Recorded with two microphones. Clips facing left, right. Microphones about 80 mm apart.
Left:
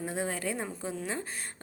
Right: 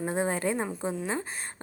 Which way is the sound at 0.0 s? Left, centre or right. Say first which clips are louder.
Right 5 dB; right.